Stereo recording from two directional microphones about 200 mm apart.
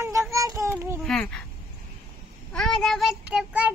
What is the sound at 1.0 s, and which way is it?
Speech, 5° left (ahead or behind).